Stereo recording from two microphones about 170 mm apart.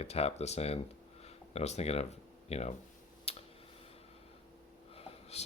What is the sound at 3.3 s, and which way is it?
Tick, 35° left (ahead or behind).